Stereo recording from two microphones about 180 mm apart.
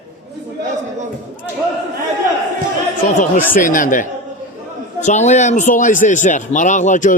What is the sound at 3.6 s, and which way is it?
Speech, 50° left (ahead or behind).